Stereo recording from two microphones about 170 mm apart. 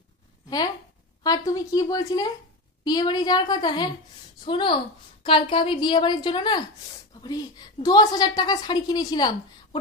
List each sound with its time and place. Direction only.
1.2 s a woman's voice: 20° left (ahead or behind)